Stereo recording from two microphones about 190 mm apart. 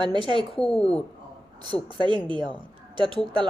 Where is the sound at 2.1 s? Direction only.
25° right (ahead or behind).